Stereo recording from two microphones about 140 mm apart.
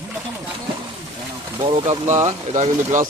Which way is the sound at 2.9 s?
70° right (ahead or behind).